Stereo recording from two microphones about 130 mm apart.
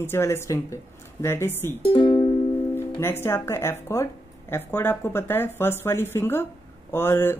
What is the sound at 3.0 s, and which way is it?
Speech, 20° left (ahead or behind).